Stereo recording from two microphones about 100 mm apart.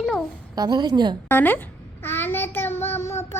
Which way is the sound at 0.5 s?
45° right (ahead or behind).